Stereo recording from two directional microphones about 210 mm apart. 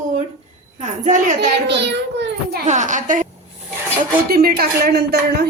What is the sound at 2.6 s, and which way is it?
Speech, 35° right (ahead or behind).